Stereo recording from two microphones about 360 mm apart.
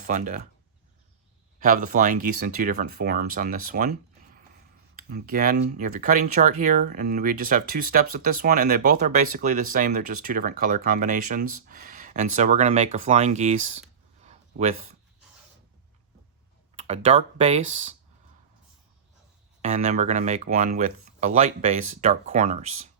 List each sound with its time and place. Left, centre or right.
0.1 s speech: right
1.5 s speech: right
5.0 s speech: right
14.3 s a sound: centre
16.7 s speech: centre
19.6 s speech: centre